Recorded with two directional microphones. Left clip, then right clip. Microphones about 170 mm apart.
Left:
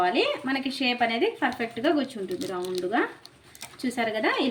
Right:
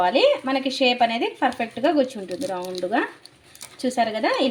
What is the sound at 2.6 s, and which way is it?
Speech, 15° left (ahead or behind).